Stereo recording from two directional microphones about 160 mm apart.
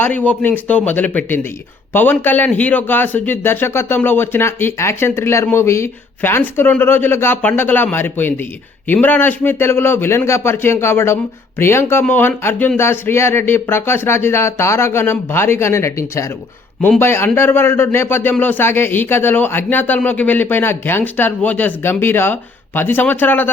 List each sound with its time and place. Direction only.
0.0 s a man's voice: 10° left (ahead or behind)